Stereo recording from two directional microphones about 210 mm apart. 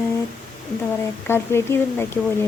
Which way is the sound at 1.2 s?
10° left (ahead or behind).